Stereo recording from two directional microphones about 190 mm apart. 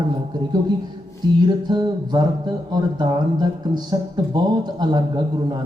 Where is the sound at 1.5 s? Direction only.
20° right (ahead or behind).